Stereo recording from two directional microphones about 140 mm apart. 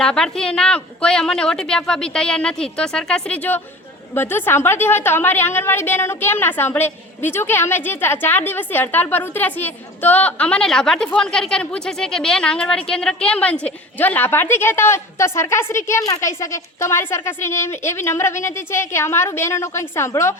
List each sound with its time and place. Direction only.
0.0 s a woman's voice: 5° left (ahead or behind)